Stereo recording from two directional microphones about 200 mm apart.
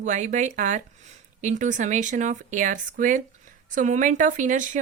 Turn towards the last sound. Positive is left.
turn(degrees=-40)  # may be behind; listen again after turning